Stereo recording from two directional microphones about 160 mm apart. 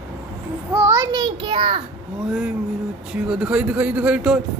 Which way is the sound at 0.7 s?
15° right (ahead or behind).